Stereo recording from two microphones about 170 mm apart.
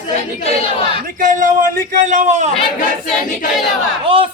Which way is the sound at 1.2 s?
50° right (ahead or behind).